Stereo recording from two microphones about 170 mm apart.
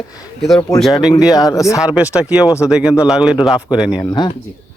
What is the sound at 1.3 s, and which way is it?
Speech, 20° left (ahead or behind).